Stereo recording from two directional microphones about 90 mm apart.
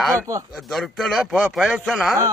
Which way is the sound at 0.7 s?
Centre (ahead or behind).